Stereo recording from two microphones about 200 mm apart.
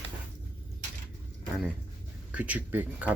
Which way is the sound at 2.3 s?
5° right (ahead or behind).